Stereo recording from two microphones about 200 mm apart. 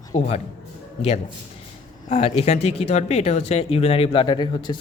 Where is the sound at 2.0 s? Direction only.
35° left (ahead or behind).